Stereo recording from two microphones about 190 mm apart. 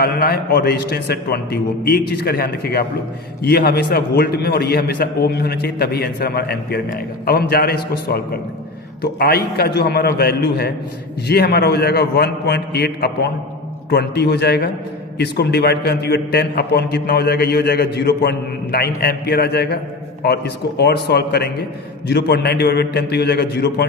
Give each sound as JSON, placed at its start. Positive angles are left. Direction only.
{"t": 0.0, "sound": "a man's voice", "side_deg": 50}